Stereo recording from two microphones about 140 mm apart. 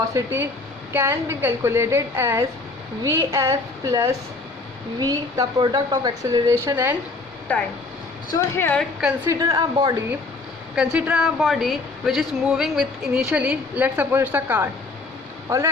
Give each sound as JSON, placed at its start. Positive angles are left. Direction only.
{"t": 0.1, "sound": "a woman's voice", "side_deg": -20}
{"t": 7.5, "sound": "a woman's voice", "side_deg": 15}
{"t": 9.2, "sound": "a woman's voice", "side_deg": -25}
{"t": 10.8, "sound": "speech", "side_deg": -10}